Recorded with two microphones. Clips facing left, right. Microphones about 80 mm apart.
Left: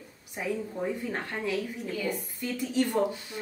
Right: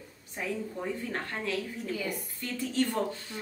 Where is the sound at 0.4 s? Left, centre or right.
Centre.